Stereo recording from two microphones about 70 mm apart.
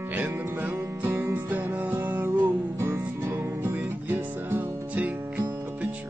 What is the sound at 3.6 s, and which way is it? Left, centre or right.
Music, right.